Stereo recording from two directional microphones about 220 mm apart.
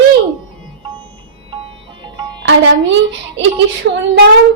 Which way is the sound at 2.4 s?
55° right (ahead or behind).